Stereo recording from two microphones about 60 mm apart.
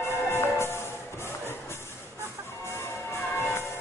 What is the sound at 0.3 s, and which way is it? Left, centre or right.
Music, left.